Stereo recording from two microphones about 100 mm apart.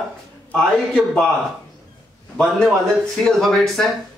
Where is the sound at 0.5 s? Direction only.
5° left (ahead or behind).